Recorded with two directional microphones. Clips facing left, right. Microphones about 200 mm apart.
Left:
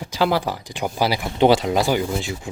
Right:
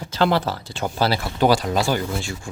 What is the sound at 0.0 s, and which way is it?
Speech, 10° left (ahead or behind).